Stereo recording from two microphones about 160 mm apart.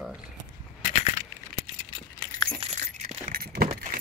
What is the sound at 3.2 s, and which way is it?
Keys jangling, 70° right (ahead or behind).